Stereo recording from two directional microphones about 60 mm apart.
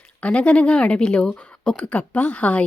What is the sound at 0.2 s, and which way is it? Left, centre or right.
A woman's voice, centre.